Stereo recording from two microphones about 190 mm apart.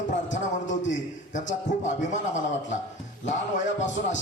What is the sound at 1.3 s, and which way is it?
Speech, 40° left (ahead or behind).